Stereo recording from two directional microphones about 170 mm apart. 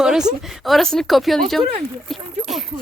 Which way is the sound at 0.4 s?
Centre (ahead or behind).